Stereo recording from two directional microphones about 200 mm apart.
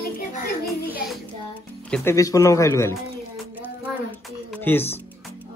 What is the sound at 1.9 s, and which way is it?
Speech, 15° left (ahead or behind).